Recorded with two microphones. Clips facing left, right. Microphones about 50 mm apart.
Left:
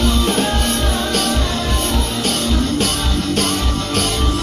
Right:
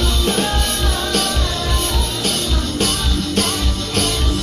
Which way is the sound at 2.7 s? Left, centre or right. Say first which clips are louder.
Left 1 dB; centre.